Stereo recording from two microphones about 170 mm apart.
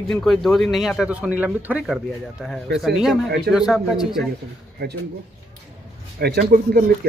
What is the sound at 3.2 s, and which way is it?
Speech, 70° right (ahead or behind).